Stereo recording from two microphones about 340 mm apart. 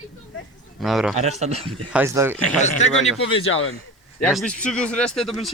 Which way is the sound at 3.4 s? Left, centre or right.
Left.